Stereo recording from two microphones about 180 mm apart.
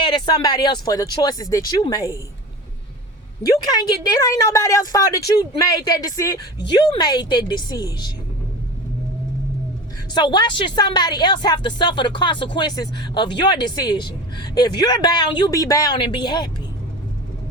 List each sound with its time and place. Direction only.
0.0 s a woman's voice: 25° left (ahead or behind)
3.4 s a woman's voice: 20° left (ahead or behind)
10.2 s a woman's voice: 25° left (ahead or behind)